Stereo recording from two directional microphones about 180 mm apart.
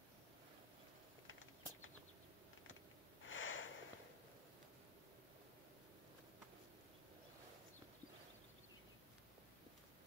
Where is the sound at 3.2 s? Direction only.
90° left.